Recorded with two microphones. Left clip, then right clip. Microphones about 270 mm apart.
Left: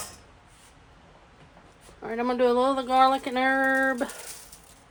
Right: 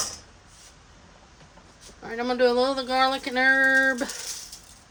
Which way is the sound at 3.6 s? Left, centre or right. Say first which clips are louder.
Right 3 dB; left.